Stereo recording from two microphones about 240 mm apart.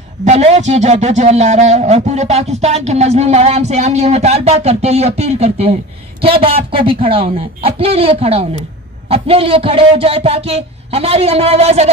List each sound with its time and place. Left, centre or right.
0.2 s speech: right